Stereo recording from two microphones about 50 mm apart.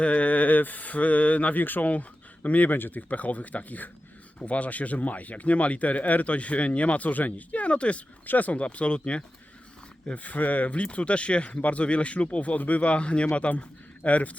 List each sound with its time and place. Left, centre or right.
0.0 s speech: left